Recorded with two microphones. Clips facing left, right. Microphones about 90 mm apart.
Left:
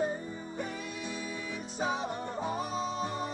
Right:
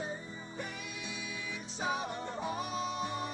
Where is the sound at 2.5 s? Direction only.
30° left (ahead or behind).